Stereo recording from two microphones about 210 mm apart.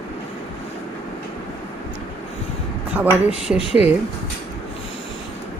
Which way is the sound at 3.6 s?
30° left (ahead or behind).